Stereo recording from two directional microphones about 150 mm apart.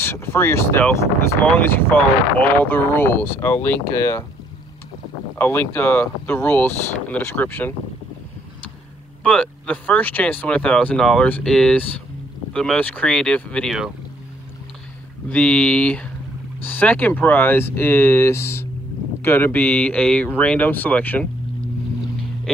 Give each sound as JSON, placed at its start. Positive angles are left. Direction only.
{"t": 0.0, "sound": "speech", "side_deg": 15}
{"t": 5.4, "sound": "speech", "side_deg": 15}
{"t": 9.2, "sound": "speech", "side_deg": 10}
{"t": 15.2, "sound": "speech", "side_deg": 10}